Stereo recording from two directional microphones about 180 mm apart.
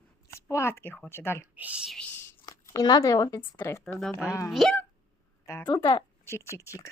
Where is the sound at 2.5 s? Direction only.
25° left (ahead or behind); by 4.8 s centre (ahead or behind).